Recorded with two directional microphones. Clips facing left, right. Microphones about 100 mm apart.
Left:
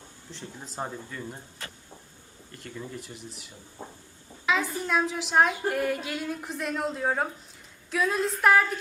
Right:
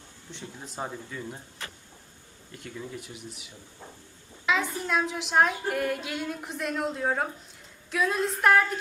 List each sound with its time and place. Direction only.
0.3 s speech: centre (ahead or behind)
2.5 s speech: centre (ahead or behind)
3.8 s a sound: 35° left (ahead or behind)
4.4 s speech: centre (ahead or behind)